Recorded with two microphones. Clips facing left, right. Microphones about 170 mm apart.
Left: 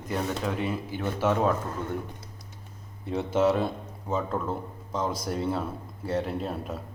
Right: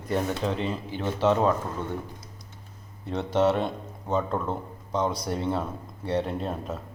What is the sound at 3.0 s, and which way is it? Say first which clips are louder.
A man's voice: right 1 dB; 5° left (ahead or behind).